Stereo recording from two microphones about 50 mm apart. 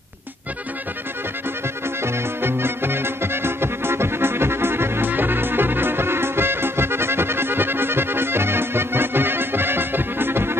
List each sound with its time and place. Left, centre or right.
2.4 s music: right